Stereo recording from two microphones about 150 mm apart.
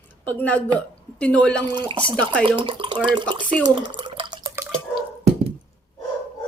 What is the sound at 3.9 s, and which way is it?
Drip, 35° right (ahead or behind).